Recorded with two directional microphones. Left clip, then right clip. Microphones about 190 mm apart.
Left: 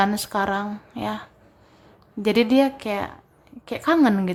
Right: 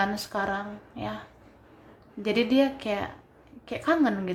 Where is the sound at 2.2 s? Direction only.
20° left (ahead or behind).